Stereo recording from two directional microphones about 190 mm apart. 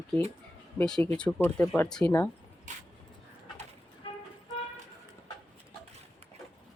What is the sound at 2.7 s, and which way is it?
Dog, 40° right (ahead or behind).